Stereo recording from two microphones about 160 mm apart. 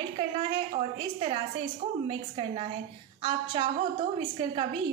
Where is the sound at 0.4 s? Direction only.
35° right (ahead or behind).